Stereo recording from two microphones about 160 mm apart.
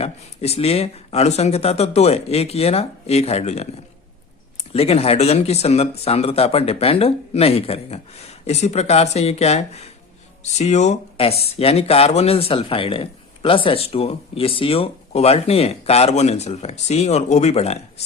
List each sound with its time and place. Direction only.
0.0 s speech: 40° left (ahead or behind)
4.7 s speech: 40° left (ahead or behind)